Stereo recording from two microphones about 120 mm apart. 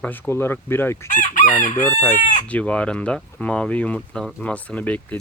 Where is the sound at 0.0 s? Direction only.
15° left (ahead or behind).